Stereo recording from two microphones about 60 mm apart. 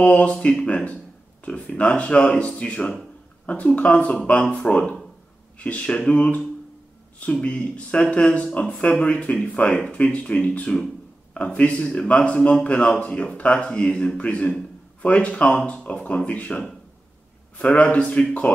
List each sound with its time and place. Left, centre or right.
0.0 s a man's voice: left
7.4 s a man's voice: left